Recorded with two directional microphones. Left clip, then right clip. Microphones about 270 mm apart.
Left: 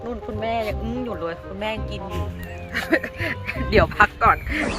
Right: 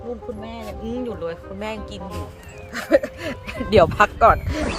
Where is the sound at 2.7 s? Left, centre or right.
Right.